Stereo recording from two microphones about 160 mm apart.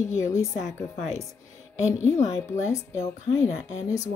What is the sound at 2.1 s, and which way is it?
Speech, 45° left (ahead or behind).